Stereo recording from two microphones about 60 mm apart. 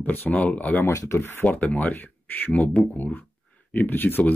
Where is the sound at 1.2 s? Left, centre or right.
Left.